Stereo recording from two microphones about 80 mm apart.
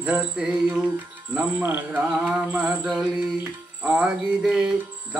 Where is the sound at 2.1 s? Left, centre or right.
Centre.